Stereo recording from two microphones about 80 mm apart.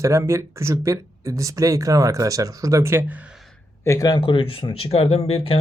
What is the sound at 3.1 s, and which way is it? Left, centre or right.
Speech, centre.